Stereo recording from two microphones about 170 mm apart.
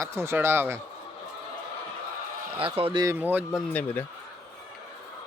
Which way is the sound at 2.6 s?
30° right (ahead or behind).